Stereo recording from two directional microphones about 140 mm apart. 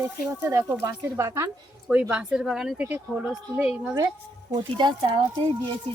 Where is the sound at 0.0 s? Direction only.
20° right (ahead or behind).